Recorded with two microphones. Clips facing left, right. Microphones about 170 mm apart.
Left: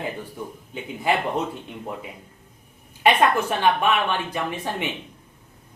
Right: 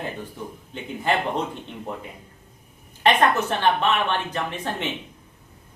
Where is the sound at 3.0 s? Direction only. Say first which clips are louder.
Left 1 dB; 10° left (ahead or behind).